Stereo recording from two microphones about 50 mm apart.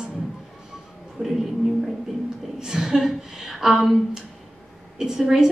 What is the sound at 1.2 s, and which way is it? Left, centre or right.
Speech, right.